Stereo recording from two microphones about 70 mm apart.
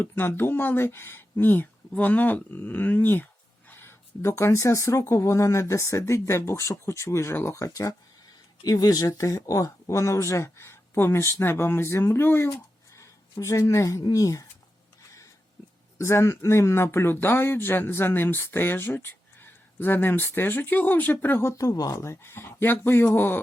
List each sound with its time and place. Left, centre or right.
0.0 s speech: left
3.7 s a sound: left
4.2 s speech: left
7.7 s speech: left
13.0 s a woman's voice: left
16.0 s speech: left
21.5 s speech: left
22.0 s speech: left